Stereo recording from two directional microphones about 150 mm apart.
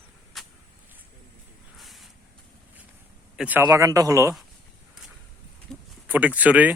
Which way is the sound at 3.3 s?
10° right (ahead or behind).